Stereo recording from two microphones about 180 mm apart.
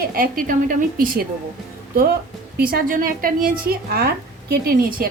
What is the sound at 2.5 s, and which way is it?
A woman's voice, 55° right (ahead or behind).